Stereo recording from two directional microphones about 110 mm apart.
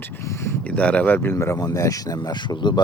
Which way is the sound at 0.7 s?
10° left (ahead or behind).